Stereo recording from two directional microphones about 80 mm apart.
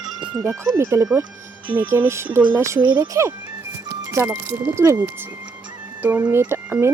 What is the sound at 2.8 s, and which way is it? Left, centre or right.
Speech, right.